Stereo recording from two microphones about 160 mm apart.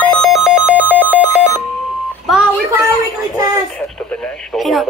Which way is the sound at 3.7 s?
5° left (ahead or behind).